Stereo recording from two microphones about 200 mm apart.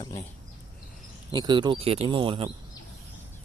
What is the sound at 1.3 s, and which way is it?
Speech, 20° right (ahead or behind).